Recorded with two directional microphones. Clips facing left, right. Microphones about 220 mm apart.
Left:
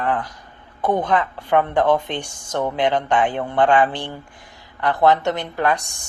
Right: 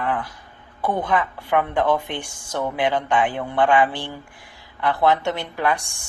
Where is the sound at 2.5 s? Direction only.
20° left (ahead or behind).